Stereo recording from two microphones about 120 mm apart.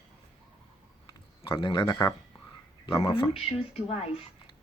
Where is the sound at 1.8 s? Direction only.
30° left (ahead or behind).